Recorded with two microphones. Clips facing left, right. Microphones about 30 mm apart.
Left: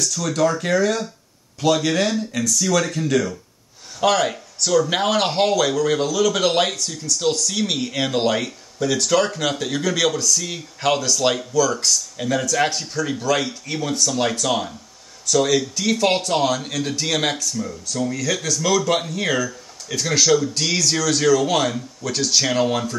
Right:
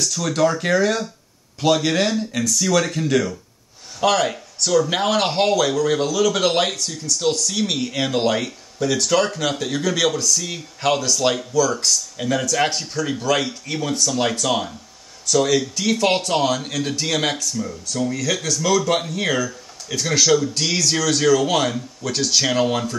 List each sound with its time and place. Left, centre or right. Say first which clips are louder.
0.3 s speech: right 1 dB; right
4.0 s speech: even; centre